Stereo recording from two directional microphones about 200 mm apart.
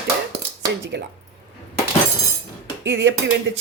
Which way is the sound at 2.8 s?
65° right (ahead or behind).